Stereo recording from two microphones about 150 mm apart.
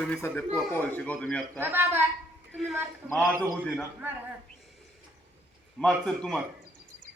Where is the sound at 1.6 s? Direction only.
15° right (ahead or behind).